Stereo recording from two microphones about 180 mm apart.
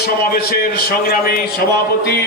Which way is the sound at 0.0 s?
60° left (ahead or behind).